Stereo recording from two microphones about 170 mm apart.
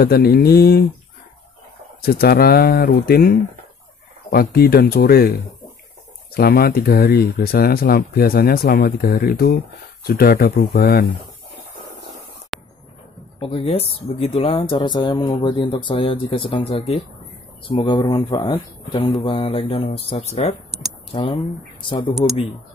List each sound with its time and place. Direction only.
0.0 s speech: 65° left (ahead or behind)
2.0 s speech: 60° left (ahead or behind)
12.5 s a sound: centre (ahead or behind)
13.4 s speech: 35° left (ahead or behind)